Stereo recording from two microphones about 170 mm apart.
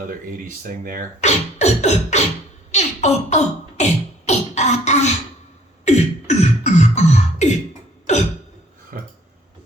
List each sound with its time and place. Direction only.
0.0 s speech: 55° right (ahead or behind)
1.2 s beatboxing: 40° left (ahead or behind)
8.9 s a sound: 55° right (ahead or behind)